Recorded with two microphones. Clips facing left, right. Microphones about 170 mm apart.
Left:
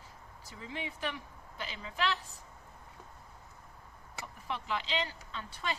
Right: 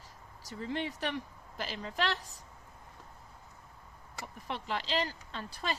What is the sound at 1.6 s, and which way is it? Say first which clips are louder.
Speech: right 1 dB; 45° right (ahead or behind).